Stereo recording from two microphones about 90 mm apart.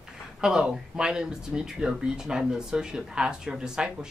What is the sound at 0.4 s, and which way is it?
Speech, 5° right (ahead or behind).